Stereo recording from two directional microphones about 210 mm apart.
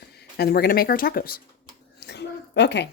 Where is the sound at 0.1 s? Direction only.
50° left (ahead or behind).